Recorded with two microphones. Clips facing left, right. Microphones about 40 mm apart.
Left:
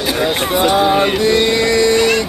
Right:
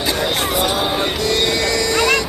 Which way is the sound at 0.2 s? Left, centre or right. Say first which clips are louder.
Left 6 dB; left.